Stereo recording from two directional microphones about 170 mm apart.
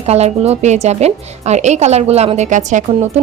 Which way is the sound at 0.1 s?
40° right (ahead or behind).